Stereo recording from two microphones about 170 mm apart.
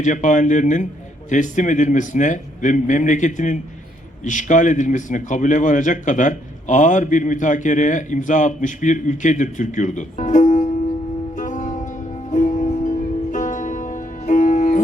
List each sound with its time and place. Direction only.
0.0 s a man's voice: 45° left (ahead or behind)
11.3 s music: 50° left (ahead or behind)